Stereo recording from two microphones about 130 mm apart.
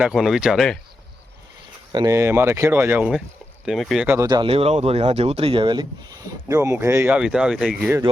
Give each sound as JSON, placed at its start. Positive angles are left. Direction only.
{"t": 0.0, "sound": "speech", "side_deg": -5}
{"t": 1.9, "sound": "speech", "side_deg": -35}
{"t": 2.1, "sound": "speech", "side_deg": -20}
{"t": 4.0, "sound": "speech", "side_deg": -15}
{"t": 4.4, "sound": "speech", "side_deg": -50}